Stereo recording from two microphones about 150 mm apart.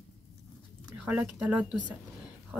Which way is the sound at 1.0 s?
10° right (ahead or behind).